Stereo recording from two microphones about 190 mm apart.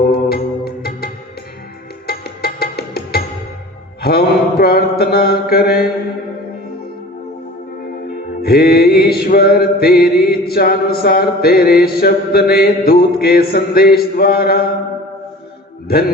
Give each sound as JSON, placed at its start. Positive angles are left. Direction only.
{"t": 0.1, "sound": "music", "side_deg": 55}
{"t": 4.0, "sound": "mantra", "side_deg": 55}
{"t": 8.4, "sound": "music", "side_deg": 55}